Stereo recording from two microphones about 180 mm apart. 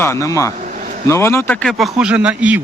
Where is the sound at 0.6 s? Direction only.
45° right (ahead or behind).